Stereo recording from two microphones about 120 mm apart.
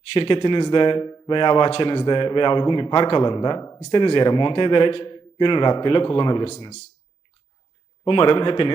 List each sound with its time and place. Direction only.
0.1 s a man's voice: 50° left (ahead or behind)
8.0 s a man's voice: 45° left (ahead or behind)